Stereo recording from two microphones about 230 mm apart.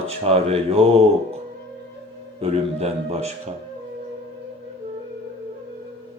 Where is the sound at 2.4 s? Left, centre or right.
Right.